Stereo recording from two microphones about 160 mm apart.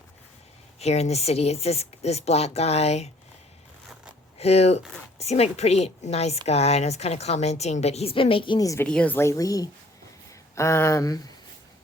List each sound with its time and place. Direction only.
0.8 s a woman's voice: 40° left (ahead or behind)
4.4 s a woman's voice: 40° left (ahead or behind); by 8.9 s 20° left (ahead or behind)
8.9 s speech: 10° left (ahead or behind)